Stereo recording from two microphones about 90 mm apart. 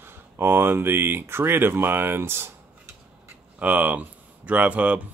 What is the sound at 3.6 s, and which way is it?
Speech, 15° right (ahead or behind).